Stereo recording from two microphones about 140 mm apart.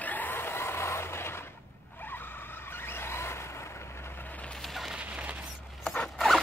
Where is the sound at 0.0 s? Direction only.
10° left (ahead or behind).